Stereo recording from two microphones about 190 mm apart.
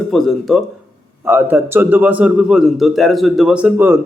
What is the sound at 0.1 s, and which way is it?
Speech, centre (ahead or behind).